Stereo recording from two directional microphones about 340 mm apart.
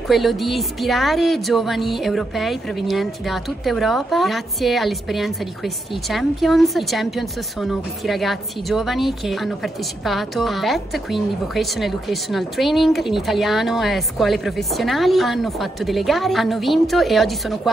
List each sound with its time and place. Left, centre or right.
0.1 s speech: centre